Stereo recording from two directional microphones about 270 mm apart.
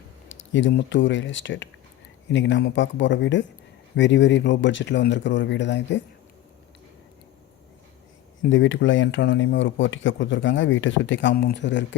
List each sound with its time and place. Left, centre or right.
0.3 s speech: left
8.4 s speech: left